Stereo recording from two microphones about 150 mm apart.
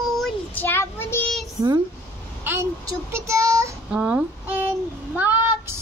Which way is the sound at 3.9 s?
10° right (ahead or behind).